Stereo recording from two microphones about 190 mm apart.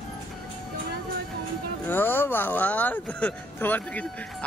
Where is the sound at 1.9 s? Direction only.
10° left (ahead or behind).